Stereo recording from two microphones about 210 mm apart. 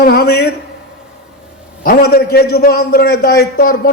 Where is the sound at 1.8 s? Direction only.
45° left (ahead or behind).